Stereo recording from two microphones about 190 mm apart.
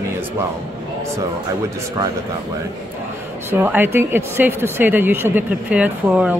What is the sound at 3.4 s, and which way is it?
Speech, 10° right (ahead or behind).